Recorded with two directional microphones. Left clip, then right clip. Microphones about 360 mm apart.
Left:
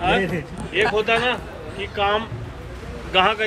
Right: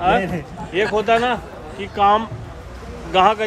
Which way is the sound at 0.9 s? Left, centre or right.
Right.